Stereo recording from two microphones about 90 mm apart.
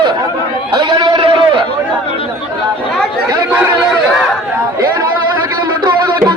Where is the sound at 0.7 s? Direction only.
55° right (ahead or behind).